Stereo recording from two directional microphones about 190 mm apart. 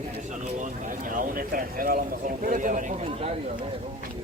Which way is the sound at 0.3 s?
45° right (ahead or behind).